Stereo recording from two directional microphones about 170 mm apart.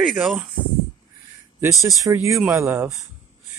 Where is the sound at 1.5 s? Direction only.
20° right (ahead or behind).